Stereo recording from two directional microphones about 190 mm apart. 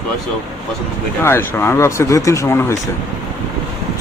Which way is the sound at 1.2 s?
15° left (ahead or behind).